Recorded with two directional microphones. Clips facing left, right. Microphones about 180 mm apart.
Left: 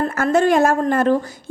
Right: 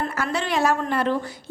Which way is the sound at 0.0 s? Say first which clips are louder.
Left 9 dB; 45° left (ahead or behind).